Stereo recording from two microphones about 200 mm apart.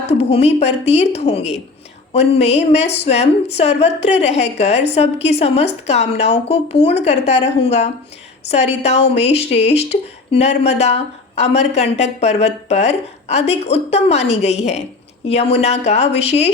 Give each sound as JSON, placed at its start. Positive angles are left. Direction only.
{"t": 0.1, "sound": "speech", "side_deg": 30}